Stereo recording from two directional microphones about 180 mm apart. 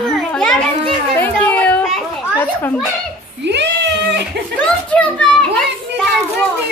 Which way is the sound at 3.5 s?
70° right (ahead or behind).